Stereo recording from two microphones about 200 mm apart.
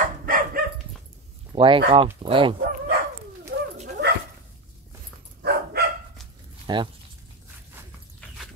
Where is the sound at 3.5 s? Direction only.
55° right (ahead or behind).